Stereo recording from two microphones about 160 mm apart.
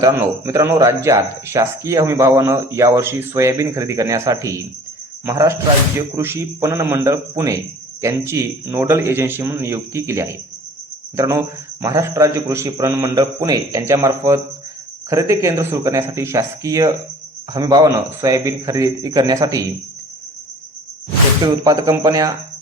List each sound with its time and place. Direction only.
0.0 s a man's voice: 20° right (ahead or behind)
21.4 s speech: 20° right (ahead or behind)